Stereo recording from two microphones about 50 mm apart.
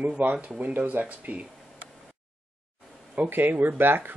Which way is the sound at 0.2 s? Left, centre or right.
Right.